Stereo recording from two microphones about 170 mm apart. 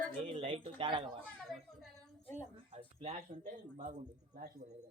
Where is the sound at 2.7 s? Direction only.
40° right (ahead or behind).